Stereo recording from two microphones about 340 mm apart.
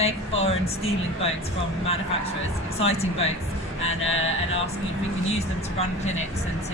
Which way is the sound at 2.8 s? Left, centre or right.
Centre.